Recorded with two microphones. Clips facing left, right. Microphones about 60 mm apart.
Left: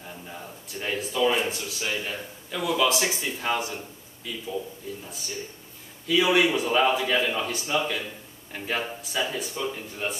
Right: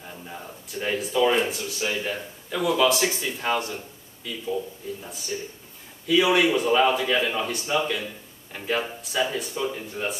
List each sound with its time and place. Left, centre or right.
0.0 s a sound: centre
1.3 s speech: centre
6.0 s speech: centre